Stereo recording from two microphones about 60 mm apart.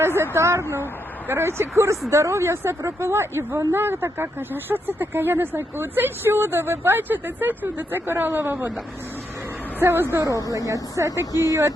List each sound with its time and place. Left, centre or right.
0.2 s speech: right
9.8 s speech: right
10.2 s speech: right
11.3 s speech: left